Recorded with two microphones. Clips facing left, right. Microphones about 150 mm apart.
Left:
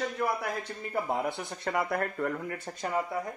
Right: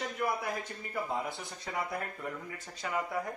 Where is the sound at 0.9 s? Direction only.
60° left (ahead or behind); by 3.0 s 40° left (ahead or behind).